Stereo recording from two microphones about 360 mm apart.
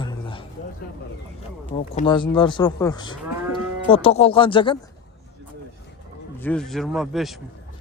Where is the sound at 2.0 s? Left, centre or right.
Centre.